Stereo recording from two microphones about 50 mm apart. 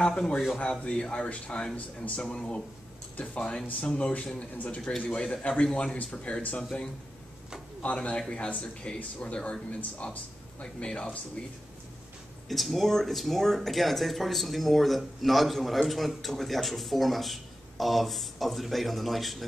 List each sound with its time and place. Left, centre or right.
0.0 s a man's voice: centre
12.4 s speech: centre